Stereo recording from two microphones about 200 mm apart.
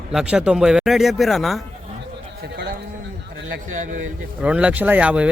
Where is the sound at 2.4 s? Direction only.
55° right (ahead or behind).